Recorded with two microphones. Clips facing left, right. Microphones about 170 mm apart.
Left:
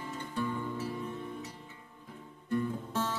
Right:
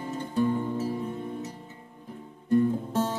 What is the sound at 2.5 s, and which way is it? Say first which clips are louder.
Guitar: right 9 dB; 40° right (ahead or behind).